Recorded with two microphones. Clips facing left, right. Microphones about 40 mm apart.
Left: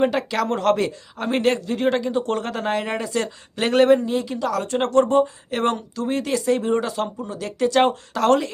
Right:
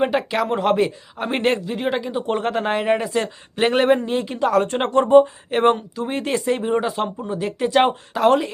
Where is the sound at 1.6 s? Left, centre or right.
Centre.